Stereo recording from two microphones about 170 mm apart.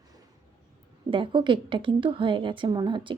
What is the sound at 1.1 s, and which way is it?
A woman's voice, 30° right (ahead or behind).